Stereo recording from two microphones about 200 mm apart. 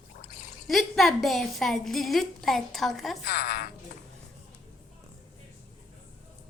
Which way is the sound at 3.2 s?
50° left (ahead or behind).